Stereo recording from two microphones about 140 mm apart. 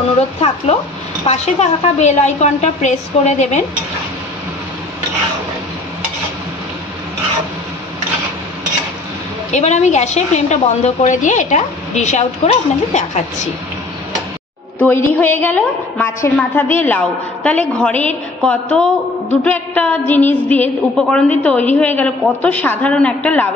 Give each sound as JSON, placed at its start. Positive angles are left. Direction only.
{"t": 1.2, "sound": "a woman's voice", "side_deg": 50}
{"t": 9.5, "sound": "a woman's voice", "side_deg": 55}
{"t": 14.8, "sound": "a woman's voice", "side_deg": 10}